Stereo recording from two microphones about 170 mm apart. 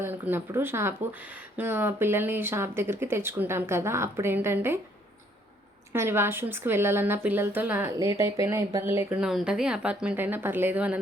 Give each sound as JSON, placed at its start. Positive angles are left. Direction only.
{"t": 0.0, "sound": "speech", "side_deg": -15}
{"t": 5.9, "sound": "speech", "side_deg": -15}
{"t": 9.2, "sound": "speech", "side_deg": -5}